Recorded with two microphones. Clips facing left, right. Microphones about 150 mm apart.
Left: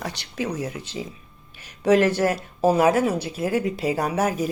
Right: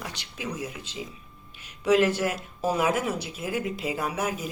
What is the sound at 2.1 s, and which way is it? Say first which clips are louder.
Speech: left 6 dB; 35° left (ahead or behind).